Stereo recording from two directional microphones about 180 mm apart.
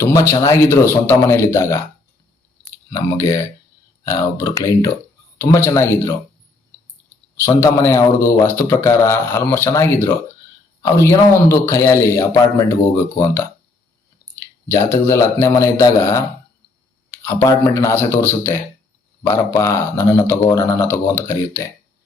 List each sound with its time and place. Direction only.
0.0 s a man's voice: 15° left (ahead or behind)
2.9 s a man's voice: 20° left (ahead or behind)
7.3 s a man's voice: 15° left (ahead or behind)